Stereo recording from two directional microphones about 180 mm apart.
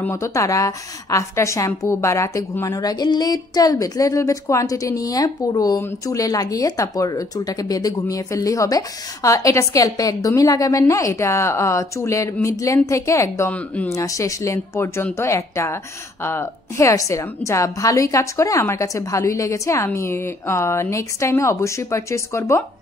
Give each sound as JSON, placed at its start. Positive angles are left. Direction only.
{"t": 0.0, "sound": "a woman's voice", "side_deg": 15}